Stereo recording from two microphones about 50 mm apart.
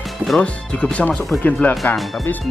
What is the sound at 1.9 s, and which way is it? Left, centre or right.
Speech, centre.